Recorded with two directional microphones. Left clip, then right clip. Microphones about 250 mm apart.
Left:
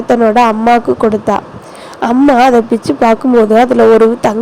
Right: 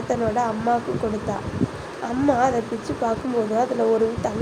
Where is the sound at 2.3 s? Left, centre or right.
Left.